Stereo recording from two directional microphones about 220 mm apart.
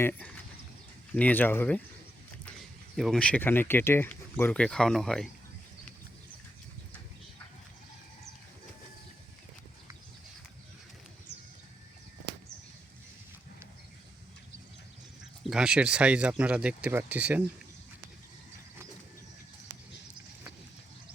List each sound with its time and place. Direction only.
0.0 s speech: 5° left (ahead or behind)
2.9 s speech: centre (ahead or behind)
11.3 s a sound: 50° right (ahead or behind)
15.4 s speech: 5° right (ahead or behind)